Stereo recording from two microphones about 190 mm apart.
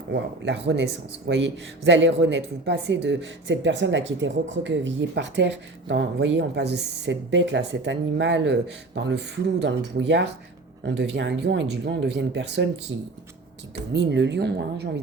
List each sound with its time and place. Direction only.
0.1 s speech: 65° right (ahead or behind)
13.9 s speech: 65° right (ahead or behind)